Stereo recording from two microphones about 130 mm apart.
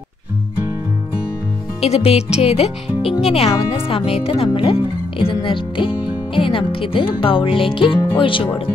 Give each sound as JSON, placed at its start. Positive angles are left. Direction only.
{"t": 1.8, "sound": "speech", "side_deg": 50}